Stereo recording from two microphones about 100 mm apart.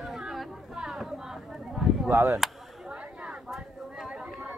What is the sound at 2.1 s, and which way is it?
Speech, 20° right (ahead or behind).